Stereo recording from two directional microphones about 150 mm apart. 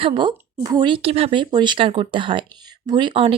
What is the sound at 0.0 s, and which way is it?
A woman's voice, 35° right (ahead or behind).